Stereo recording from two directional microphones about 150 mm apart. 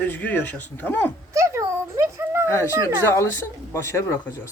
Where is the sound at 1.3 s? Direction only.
20° right (ahead or behind).